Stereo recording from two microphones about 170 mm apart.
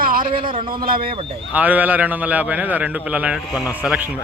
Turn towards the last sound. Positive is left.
turn(degrees=-5)  # may be behind; listen again after turning